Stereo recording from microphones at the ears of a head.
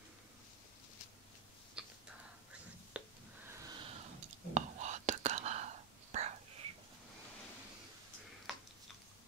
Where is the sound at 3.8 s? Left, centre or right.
Right.